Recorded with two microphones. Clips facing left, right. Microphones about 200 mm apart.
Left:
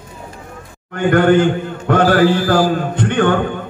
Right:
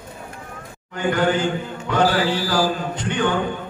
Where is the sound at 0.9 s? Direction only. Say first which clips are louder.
Left 8 dB; 55° left (ahead or behind).